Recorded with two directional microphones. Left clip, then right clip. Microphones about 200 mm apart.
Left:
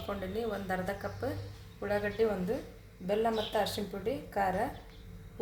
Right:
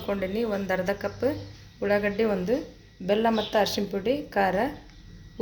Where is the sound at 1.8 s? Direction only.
45° right (ahead or behind).